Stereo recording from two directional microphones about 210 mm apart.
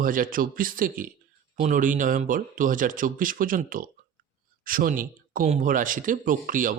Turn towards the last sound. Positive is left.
turn(degrees=-40)  # may be behind; listen again after turning